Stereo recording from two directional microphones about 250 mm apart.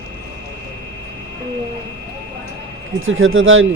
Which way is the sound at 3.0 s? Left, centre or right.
Right.